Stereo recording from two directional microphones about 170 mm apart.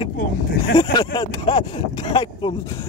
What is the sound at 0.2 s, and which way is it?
Speech, 55° left (ahead or behind).